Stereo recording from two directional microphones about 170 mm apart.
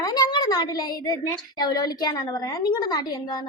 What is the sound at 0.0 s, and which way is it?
A woman's voice, 25° left (ahead or behind).